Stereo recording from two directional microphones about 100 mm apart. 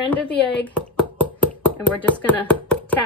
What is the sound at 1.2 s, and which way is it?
Chopping, 15° left (ahead or behind).